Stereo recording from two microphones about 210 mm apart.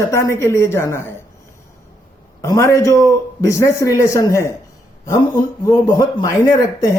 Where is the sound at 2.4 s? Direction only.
15° left (ahead or behind).